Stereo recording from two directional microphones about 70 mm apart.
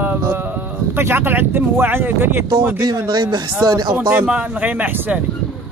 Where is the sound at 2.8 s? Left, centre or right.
Right.